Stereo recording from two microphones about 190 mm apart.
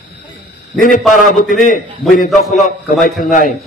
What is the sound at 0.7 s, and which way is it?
A man's voice, 45° left (ahead or behind).